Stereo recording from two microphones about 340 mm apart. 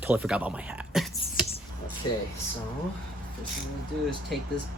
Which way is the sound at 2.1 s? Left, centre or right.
Left.